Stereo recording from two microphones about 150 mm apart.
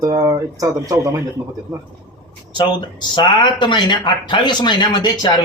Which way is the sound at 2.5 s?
30° left (ahead or behind).